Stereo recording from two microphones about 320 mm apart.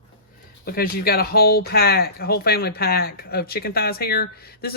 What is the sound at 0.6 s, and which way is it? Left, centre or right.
Speech, left.